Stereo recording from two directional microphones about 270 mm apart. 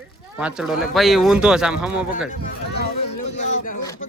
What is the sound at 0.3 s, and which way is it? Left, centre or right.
Speech, centre.